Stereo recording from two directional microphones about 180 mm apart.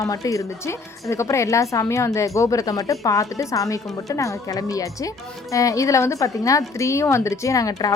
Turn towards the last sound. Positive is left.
turn(degrees=20)  # may be behind; listen again after turning